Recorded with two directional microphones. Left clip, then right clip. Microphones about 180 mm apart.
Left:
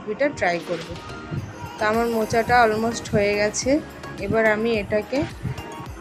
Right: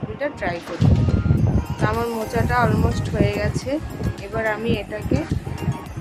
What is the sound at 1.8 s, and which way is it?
Speech, 15° left (ahead or behind).